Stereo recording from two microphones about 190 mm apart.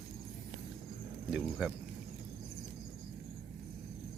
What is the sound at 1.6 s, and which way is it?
Speech, 5° right (ahead or behind).